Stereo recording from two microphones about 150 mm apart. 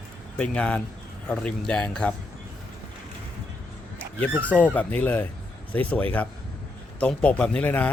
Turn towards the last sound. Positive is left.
turn(degrees=10)  # may be behind; listen again after turning